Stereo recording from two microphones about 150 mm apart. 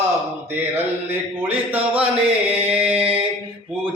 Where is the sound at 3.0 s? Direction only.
35° right (ahead or behind).